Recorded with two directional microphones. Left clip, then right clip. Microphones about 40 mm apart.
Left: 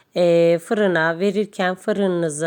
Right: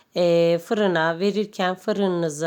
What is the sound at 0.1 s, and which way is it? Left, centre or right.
A woman's voice, left.